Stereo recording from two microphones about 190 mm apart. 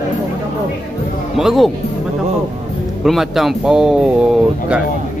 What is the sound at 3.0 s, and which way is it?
Speech, centre (ahead or behind).